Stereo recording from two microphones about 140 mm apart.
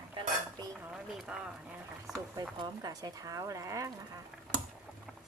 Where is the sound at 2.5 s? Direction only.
25° right (ahead or behind).